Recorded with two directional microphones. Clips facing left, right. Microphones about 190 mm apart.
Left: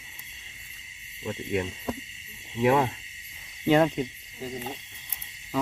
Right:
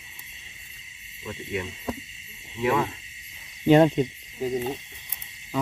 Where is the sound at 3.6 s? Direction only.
20° right (ahead or behind).